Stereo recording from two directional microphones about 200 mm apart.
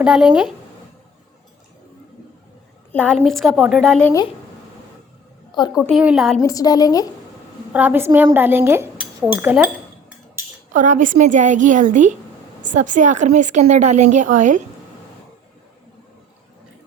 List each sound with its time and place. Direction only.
0.0 s a woman's voice: 5° right (ahead or behind)
2.9 s a woman's voice: 5° left (ahead or behind)
5.5 s a woman's voice: 20° left (ahead or behind)
5.8 s a woman's voice: 5° right (ahead or behind)
6.4 s a woman's voice: 15° left (ahead or behind)
7.7 s speech: 10° right (ahead or behind)
10.7 s a woman's voice: 40° right (ahead or behind)